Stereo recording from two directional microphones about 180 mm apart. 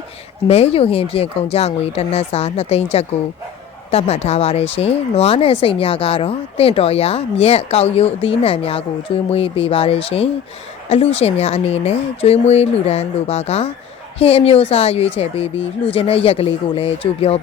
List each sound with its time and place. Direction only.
0.4 s speech: 35° left (ahead or behind)